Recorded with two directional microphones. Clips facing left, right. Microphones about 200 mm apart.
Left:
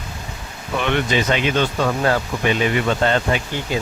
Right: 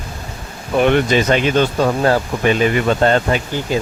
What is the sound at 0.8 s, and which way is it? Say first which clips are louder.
Speech: right 6 dB; 45° right (ahead or behind).